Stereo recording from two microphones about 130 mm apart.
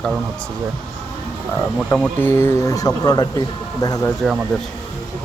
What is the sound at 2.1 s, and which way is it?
Speech, 15° left (ahead or behind).